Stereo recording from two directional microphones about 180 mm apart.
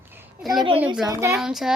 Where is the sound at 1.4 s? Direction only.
Centre (ahead or behind).